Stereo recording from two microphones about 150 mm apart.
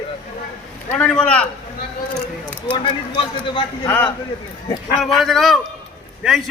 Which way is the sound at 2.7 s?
35° left (ahead or behind).